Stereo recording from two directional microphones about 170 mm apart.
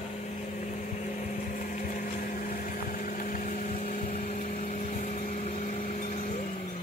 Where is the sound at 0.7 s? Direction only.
45° left (ahead or behind).